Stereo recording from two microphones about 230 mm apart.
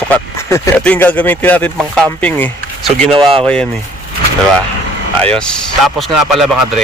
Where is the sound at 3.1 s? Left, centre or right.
Right.